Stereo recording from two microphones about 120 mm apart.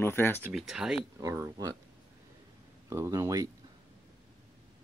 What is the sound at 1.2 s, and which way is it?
Speech, 25° right (ahead or behind).